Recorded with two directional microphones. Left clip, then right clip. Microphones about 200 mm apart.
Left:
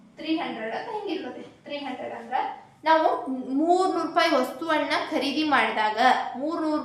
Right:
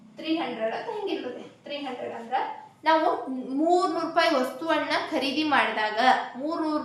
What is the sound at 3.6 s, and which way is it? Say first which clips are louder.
A woman's voice: left 1 dB; 10° left (ahead or behind).